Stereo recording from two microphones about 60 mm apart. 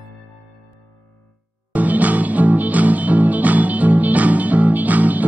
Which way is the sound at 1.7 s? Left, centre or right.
Right.